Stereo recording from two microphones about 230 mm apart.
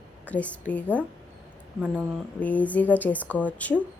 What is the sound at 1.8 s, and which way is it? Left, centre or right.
Speech, centre.